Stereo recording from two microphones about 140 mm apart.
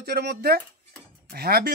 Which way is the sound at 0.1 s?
90° right.